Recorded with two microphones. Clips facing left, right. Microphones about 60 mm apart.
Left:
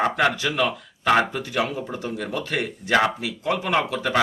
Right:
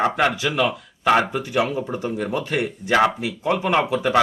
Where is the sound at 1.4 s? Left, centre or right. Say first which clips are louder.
Right 3 dB; right.